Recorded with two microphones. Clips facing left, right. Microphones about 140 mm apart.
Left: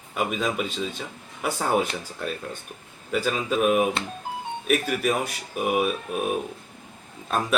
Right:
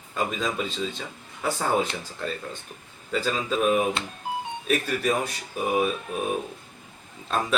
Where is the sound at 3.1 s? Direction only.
10° left (ahead or behind).